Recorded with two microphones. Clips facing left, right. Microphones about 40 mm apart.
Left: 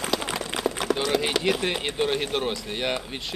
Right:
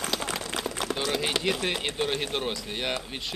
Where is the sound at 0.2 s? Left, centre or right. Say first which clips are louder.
Left 2 dB; left.